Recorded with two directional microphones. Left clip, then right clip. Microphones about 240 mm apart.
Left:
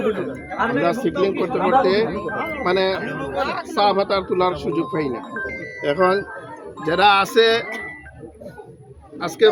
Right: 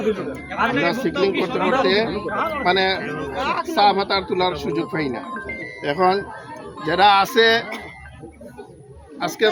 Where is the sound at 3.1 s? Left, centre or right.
Left.